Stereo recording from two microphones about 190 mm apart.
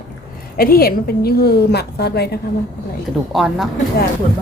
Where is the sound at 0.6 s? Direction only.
50° left (ahead or behind).